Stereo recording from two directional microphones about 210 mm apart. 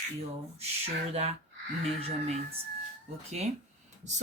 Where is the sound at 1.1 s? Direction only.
30° right (ahead or behind).